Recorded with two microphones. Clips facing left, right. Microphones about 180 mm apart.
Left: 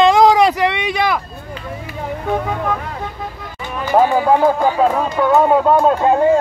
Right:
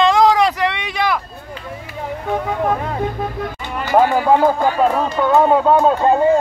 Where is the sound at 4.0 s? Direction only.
10° left (ahead or behind).